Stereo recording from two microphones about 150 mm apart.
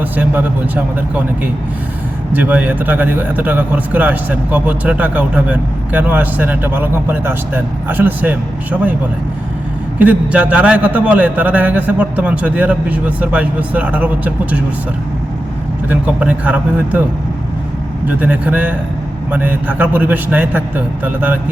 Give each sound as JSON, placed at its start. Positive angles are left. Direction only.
{"t": 0.0, "sound": "speech", "side_deg": -10}
{"t": 2.3, "sound": "a man's voice", "side_deg": -10}
{"t": 10.0, "sound": "a man's voice", "side_deg": -10}
{"t": 15.9, "sound": "a man's voice", "side_deg": -10}
{"t": 18.0, "sound": "a man's voice", "side_deg": -10}